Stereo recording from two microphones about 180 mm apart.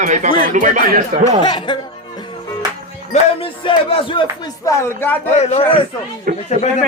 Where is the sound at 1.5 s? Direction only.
25° left (ahead or behind).